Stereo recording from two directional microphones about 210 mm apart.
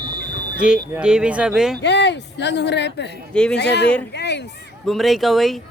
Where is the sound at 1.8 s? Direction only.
55° left (ahead or behind).